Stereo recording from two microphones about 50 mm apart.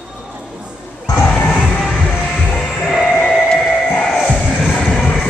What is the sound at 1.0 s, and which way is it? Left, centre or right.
Crowd, left.